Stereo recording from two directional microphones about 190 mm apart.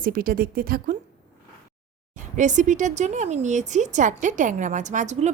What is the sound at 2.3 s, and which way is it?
Speech, 40° right (ahead or behind).